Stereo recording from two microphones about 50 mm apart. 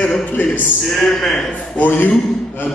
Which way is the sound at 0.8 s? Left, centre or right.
Centre.